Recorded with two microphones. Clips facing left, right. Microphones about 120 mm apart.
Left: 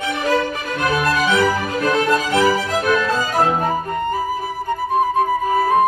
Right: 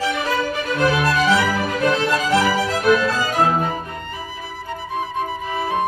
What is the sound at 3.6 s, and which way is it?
Music, 45° left (ahead or behind).